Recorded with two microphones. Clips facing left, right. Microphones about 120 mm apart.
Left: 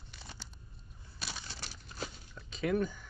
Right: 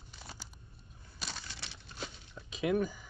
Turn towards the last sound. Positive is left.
turn(degrees=-5)  # may be behind; listen again after turning